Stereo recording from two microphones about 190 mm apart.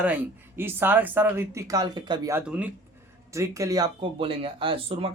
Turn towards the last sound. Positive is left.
turn(degrees=-30)  # may be behind; listen again after turning